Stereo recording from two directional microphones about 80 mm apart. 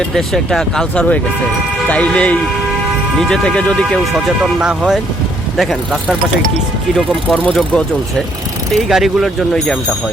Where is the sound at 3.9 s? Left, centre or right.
Centre.